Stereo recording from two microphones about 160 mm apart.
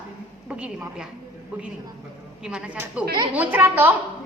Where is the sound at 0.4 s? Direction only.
5° right (ahead or behind).